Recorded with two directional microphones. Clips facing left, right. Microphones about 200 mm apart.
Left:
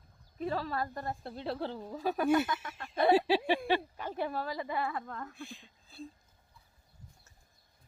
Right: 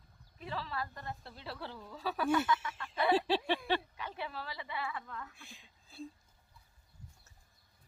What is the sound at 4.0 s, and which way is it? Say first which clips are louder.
A woman's voice: left 7 dB; 45° left (ahead or behind).